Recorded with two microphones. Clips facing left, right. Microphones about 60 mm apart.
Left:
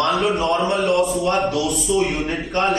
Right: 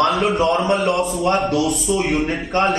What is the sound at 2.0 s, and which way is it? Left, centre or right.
Speech, centre.